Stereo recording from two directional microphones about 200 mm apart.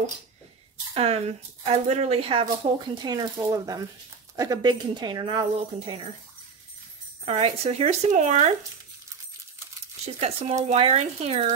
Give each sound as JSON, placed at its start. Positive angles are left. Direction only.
{"t": 0.9, "sound": "speech", "side_deg": -30}
{"t": 7.2, "sound": "speech", "side_deg": -30}
{"t": 10.0, "sound": "speech", "side_deg": -35}